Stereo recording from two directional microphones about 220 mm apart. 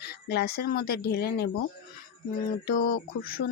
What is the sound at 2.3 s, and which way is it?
Mantra, 40° left (ahead or behind).